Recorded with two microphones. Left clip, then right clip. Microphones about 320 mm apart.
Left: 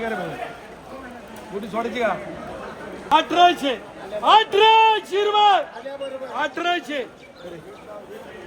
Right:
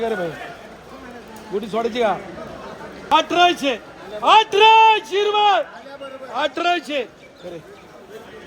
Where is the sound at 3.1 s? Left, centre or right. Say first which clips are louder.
Even; right.